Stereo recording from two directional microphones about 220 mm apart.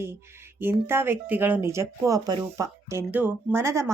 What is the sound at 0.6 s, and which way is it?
A woman's voice, 10° right (ahead or behind).